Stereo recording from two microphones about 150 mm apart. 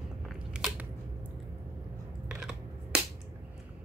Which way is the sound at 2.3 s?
5° right (ahead or behind).